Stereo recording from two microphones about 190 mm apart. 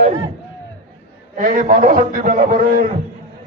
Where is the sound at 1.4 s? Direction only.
50° right (ahead or behind).